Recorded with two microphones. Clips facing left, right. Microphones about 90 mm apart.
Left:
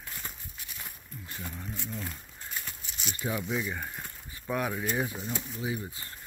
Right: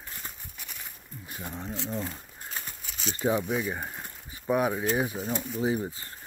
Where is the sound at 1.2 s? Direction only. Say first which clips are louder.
Right 2 dB; 15° right (ahead or behind).